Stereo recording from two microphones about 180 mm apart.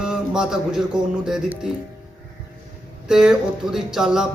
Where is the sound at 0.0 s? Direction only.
5° right (ahead or behind).